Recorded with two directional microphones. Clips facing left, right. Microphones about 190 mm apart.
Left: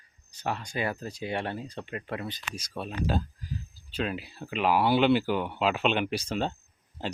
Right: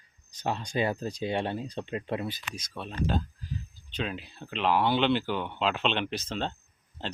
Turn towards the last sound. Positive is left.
turn(degrees=10)  # may be behind; listen again after turning